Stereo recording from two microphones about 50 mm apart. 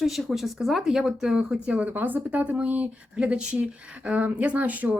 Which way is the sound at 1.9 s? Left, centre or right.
Right.